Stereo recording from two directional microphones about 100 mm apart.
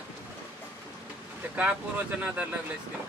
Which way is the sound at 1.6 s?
15° right (ahead or behind).